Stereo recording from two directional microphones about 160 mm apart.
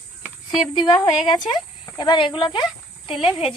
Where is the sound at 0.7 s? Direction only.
25° left (ahead or behind).